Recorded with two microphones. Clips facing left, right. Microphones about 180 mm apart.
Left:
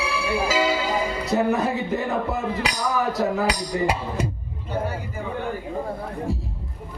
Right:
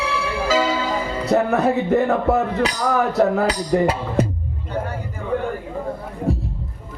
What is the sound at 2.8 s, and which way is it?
Music, 60° right (ahead or behind).